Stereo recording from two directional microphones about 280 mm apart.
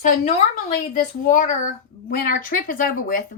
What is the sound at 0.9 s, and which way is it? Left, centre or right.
A woman's voice, left.